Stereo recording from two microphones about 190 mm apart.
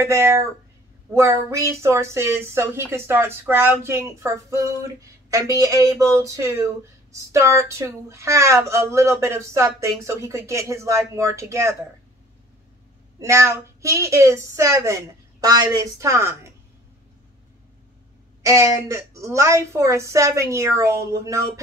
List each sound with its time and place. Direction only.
0.0 s speech: 15° right (ahead or behind)
13.2 s speech: 15° right (ahead or behind)
18.4 s speech: 15° right (ahead or behind)